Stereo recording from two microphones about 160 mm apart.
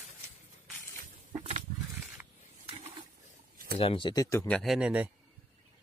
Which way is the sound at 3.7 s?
35° left (ahead or behind).